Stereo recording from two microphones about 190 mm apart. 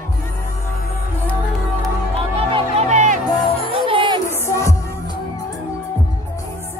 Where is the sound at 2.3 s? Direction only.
30° right (ahead or behind).